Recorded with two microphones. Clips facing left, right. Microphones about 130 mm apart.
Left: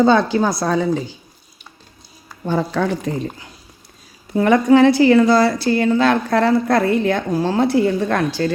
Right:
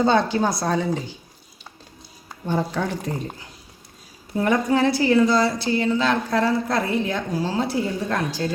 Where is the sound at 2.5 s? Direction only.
90° left.